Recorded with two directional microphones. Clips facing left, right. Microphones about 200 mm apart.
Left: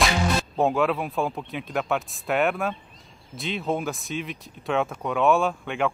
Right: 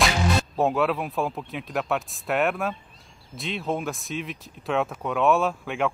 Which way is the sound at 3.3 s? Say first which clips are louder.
Left 1 dB; centre (ahead or behind).